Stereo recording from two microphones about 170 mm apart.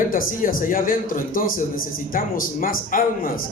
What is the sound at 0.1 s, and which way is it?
Speech, 55° left (ahead or behind).